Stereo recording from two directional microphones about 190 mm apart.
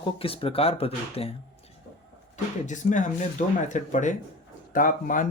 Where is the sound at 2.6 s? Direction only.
40° left (ahead or behind).